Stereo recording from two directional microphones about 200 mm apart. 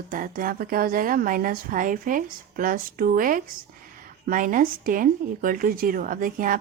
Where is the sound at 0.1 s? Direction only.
45° right (ahead or behind).